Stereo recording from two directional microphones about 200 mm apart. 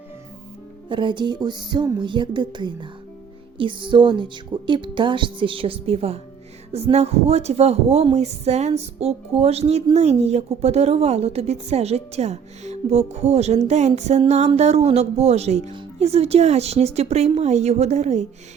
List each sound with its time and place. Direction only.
0.9 s speech: 25° right (ahead or behind)